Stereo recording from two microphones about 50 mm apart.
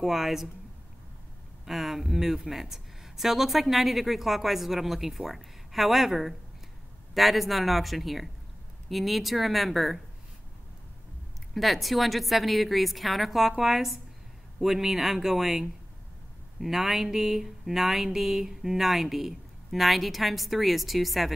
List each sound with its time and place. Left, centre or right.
0.0 s speech: centre
1.7 s speech: centre
11.5 s speech: centre